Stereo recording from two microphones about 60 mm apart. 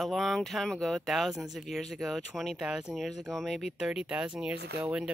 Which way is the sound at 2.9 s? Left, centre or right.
Centre.